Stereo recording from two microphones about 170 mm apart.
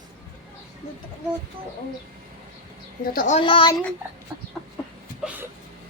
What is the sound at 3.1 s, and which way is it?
Speech, 55° left (ahead or behind).